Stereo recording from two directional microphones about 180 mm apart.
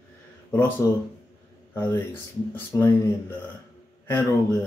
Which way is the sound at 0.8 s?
20° left (ahead or behind).